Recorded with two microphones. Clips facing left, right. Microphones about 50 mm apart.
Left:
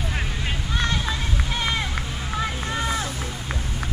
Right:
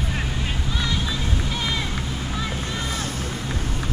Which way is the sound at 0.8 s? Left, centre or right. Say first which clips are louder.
Left 2 dB; left.